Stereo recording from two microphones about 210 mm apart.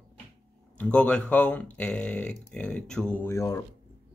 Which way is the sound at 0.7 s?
5° left (ahead or behind).